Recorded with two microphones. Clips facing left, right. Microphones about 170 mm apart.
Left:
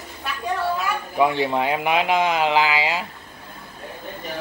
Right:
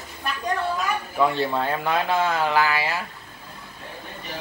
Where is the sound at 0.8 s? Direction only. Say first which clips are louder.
Left 2 dB; 15° left (ahead or behind).